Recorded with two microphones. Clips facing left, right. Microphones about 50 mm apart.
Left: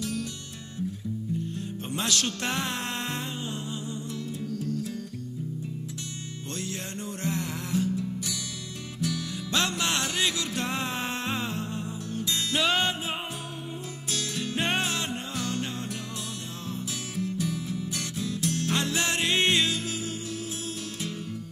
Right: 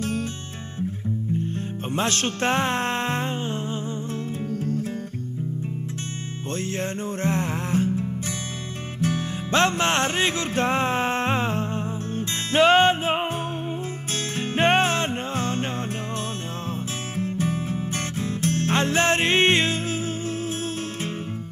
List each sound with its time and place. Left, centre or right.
0.0 s music: right
1.5 s music: right
6.5 s music: right
17.2 s music: right